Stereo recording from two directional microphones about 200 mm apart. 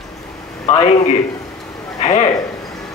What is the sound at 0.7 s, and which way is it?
A man's voice, 30° left (ahead or behind).